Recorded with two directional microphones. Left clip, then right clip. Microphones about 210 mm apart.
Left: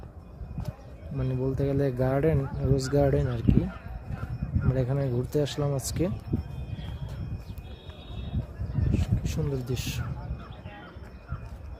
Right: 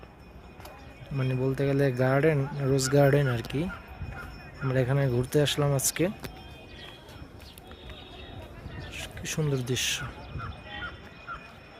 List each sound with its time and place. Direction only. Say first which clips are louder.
1.2 s speech: right 1 dB; 5° right (ahead or behind)
1.5 s speech: right 2 dB; 5° left (ahead or behind)
4.7 s speech: right 3 dB; centre (ahead or behind)
8.9 s a sound: even; centre (ahead or behind)